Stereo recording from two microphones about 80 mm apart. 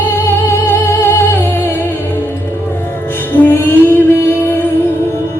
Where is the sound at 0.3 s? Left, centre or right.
Left.